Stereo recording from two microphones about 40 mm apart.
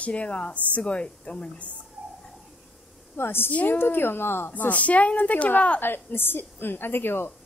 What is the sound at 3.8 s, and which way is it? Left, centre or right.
Speech, left.